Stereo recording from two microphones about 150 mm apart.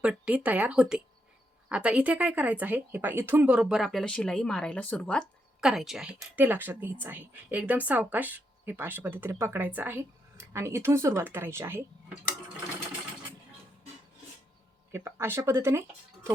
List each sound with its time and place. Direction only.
0.0 s a woman's voice: 5° right (ahead or behind)
14.9 s speech: 15° right (ahead or behind)